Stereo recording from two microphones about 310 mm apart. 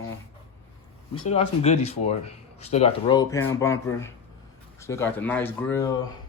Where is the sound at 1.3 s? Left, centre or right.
Centre.